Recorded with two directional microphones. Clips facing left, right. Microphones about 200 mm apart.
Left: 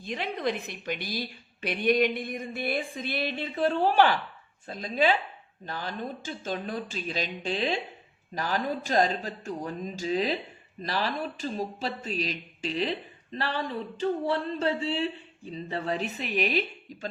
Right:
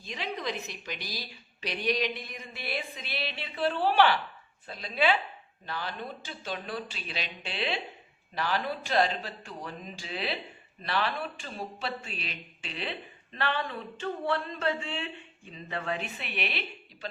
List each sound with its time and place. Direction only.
0.0 s a woman's voice: 55° left (ahead or behind)